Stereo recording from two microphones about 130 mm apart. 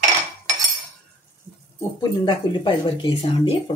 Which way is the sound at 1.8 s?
25° left (ahead or behind).